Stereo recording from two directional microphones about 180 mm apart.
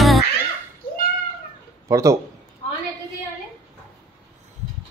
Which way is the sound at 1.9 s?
15° right (ahead or behind).